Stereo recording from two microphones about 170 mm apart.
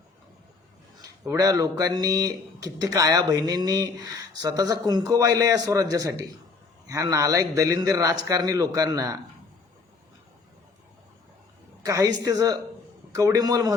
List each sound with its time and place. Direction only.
1.2 s speech: 20° right (ahead or behind)
11.8 s speech: 20° right (ahead or behind)